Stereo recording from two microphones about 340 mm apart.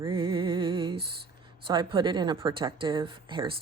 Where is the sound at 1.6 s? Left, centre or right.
Centre.